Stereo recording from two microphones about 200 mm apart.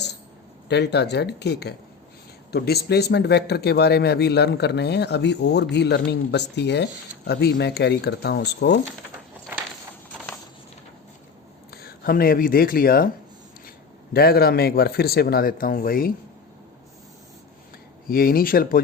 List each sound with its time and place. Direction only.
0.7 s a man's voice: 55° left (ahead or behind)
11.7 s speech: 50° left (ahead or behind)
14.1 s speech: 50° left (ahead or behind)
18.1 s speech: 45° left (ahead or behind)